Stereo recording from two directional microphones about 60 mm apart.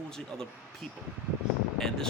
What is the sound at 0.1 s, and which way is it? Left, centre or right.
Speech, centre.